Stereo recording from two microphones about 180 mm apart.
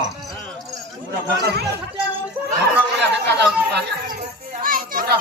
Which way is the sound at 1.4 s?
65° right (ahead or behind).